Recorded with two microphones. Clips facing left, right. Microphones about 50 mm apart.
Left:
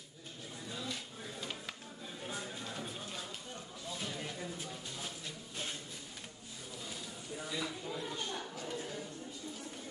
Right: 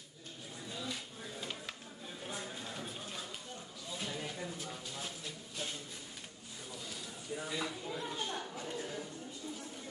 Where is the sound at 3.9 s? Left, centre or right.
Centre.